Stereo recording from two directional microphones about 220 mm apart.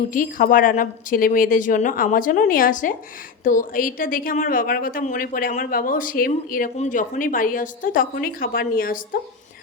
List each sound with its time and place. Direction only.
0.1 s a woman's voice: 40° left (ahead or behind)